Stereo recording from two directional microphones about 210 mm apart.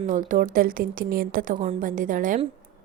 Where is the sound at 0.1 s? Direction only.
40° right (ahead or behind).